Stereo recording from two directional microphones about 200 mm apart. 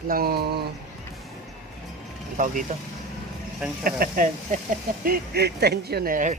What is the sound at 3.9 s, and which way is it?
Speech, 45° right (ahead or behind).